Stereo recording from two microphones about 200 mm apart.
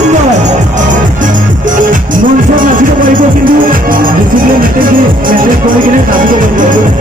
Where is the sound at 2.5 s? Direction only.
40° right (ahead or behind).